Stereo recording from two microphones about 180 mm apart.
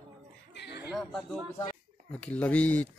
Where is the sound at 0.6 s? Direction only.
70° left (ahead or behind).